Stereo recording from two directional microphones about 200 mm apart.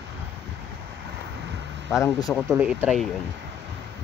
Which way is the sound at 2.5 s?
10° right (ahead or behind).